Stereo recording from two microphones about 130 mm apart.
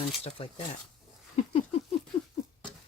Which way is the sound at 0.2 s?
45° left (ahead or behind).